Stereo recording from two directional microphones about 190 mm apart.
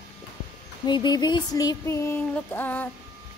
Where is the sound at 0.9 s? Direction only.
25° left (ahead or behind).